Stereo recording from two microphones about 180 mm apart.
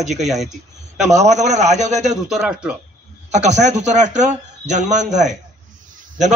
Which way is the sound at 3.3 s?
40° right (ahead or behind).